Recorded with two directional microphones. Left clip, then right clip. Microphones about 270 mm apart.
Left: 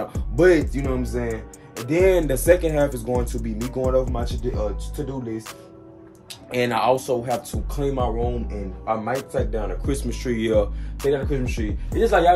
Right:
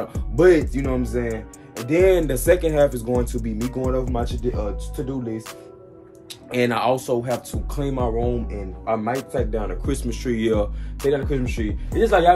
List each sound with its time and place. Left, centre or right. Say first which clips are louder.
0.1 s speech: right 1 dB; centre
6.5 s speech: even; centre